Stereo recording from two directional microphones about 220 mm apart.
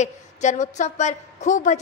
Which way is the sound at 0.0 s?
35° left (ahead or behind).